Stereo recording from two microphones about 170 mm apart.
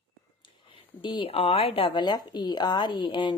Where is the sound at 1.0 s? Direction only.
30° left (ahead or behind).